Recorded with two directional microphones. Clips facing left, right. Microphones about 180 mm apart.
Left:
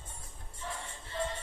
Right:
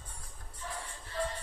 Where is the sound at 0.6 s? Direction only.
25° left (ahead or behind).